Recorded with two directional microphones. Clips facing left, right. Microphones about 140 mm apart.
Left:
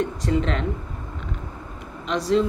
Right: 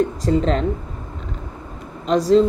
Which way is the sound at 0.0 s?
35° right (ahead or behind).